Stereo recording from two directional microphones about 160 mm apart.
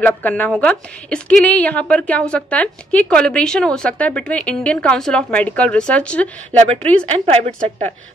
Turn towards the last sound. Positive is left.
turn(degrees=-40)  # may be behind; listen again after turning